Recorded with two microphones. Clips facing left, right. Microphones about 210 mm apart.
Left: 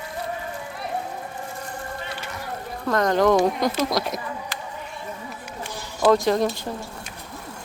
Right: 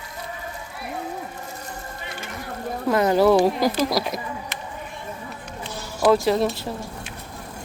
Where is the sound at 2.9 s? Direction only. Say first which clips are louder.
Right 2 dB; 10° right (ahead or behind).